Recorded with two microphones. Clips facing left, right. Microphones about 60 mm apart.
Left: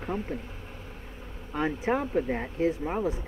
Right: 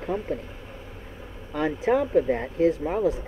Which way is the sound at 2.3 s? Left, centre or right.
Centre.